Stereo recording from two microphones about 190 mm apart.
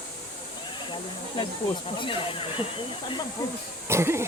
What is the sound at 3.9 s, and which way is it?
Speech, 15° right (ahead or behind).